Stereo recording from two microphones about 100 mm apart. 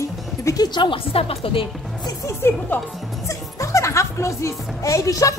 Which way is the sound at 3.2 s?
30° left (ahead or behind).